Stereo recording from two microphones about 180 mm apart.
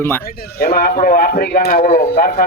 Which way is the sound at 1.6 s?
45° left (ahead or behind).